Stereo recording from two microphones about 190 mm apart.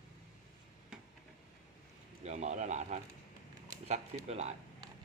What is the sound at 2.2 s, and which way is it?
Speech, 35° right (ahead or behind).